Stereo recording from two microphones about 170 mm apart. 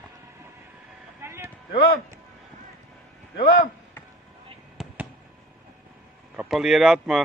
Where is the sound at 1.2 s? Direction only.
15° right (ahead or behind).